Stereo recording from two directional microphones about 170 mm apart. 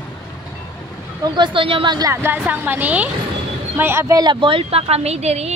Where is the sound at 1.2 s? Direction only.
25° right (ahead or behind).